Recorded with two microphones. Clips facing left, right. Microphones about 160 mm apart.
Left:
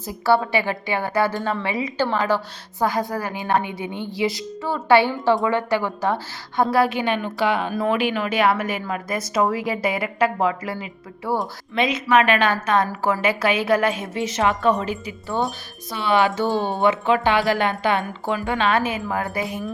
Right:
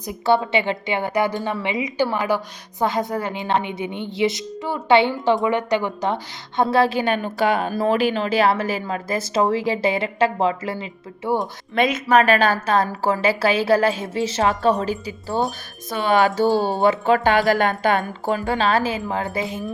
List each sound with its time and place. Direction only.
0.0 s a woman's voice: 20° right (ahead or behind)
7.0 s a woman's voice: 45° right (ahead or behind); by 11.3 s 25° right (ahead or behind)
11.7 s a woman's voice: 50° right (ahead or behind)
15.9 s a woman's voice: 45° right (ahead or behind)
16.5 s speech: centre (ahead or behind)
16.8 s a woman's voice: 40° right (ahead or behind)